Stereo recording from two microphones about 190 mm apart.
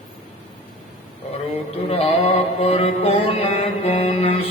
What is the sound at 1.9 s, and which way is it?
Mantra, 30° left (ahead or behind).